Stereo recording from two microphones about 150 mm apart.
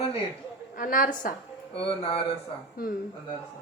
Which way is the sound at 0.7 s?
65° left (ahead or behind).